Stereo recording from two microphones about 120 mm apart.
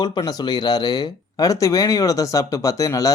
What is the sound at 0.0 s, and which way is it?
Speech, 35° left (ahead or behind).